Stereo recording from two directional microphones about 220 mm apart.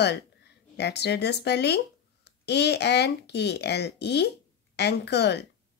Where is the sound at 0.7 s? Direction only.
50° left (ahead or behind).